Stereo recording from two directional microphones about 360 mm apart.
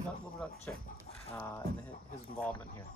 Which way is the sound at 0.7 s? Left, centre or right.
Centre.